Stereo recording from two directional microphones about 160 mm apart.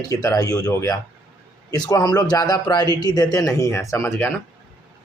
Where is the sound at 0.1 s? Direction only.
20° left (ahead or behind).